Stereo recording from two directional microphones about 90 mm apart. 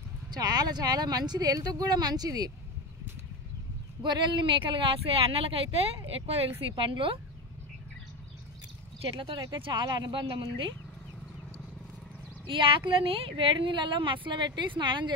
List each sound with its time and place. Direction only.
0.3 s speech: 50° right (ahead or behind)
4.0 s speech: 60° right (ahead or behind); by 5.9 s 90° right
6.7 s a woman's voice: 70° right (ahead or behind)
9.4 s speech: 55° right (ahead or behind)
10.2 s a woman's voice: 70° right (ahead or behind)
12.4 s a woman's voice: 75° right (ahead or behind); by 15.1 s 60° right (ahead or behind)